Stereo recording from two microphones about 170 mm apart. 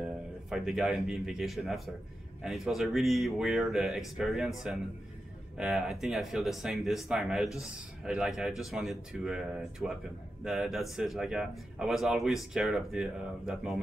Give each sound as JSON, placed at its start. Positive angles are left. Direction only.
{"t": 0.0, "sound": "speech", "side_deg": -5}